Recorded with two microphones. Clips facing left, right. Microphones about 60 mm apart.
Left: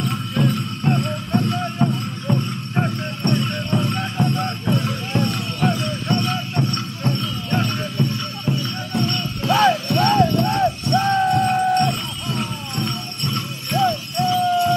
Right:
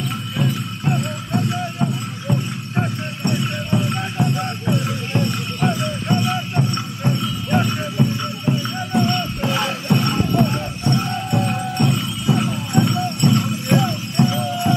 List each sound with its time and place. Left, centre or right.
0.0 s music: centre
1.9 s clip-clop: centre
3.2 s music: centre
10.9 s music: right
11.3 s music: centre
14.1 s a sound: right